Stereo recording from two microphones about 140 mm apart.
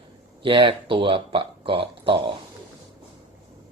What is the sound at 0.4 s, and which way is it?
Speech, 40° right (ahead or behind).